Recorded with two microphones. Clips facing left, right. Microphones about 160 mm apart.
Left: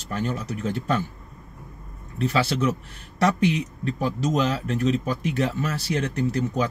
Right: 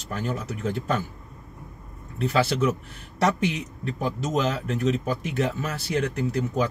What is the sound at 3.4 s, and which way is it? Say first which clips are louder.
Speech: left 4 dB; 5° right (ahead or behind).